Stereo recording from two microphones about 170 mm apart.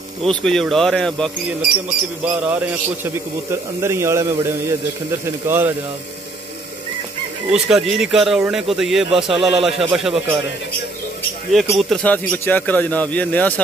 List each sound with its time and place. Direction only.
0.2 s speech: 5° left (ahead or behind)
2.2 s a man's voice: 10° right (ahead or behind)
7.5 s speech: 5° right (ahead or behind)
11.5 s speech: 5° left (ahead or behind)